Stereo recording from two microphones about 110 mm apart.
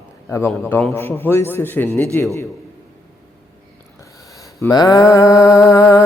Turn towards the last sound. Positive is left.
turn(degrees=30)  # may be behind; listen again after turning